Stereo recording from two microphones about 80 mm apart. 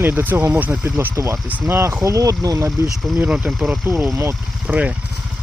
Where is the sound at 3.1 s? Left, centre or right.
Centre.